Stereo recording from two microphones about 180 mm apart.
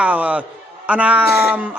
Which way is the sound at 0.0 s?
10° right (ahead or behind).